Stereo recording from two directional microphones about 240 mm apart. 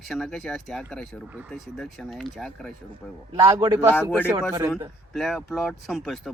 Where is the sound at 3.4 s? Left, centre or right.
Centre.